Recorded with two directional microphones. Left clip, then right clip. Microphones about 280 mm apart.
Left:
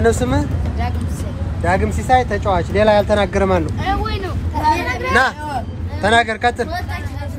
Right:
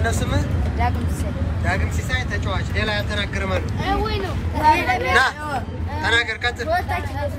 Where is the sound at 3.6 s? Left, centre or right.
Left.